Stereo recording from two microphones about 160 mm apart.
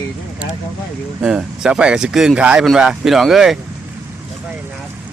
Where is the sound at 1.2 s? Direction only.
5° right (ahead or behind).